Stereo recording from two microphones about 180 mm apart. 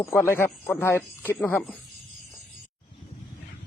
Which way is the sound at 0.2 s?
10° left (ahead or behind).